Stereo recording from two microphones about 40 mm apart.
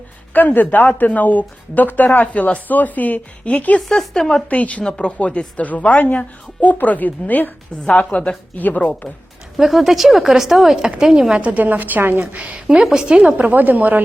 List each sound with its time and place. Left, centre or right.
0.5 s speech: left
3.8 s speech: centre
4.4 s speech: left
4.8 s speech: left
5.1 s speech: left
8.1 s speech: left
8.5 s speech: left
9.6 s speech: centre
10.8 s a woman's voice: right
11.3 s a woman's voice: right
11.6 s speech: right
12.5 s a woman's voice: centre
13.5 s speech: right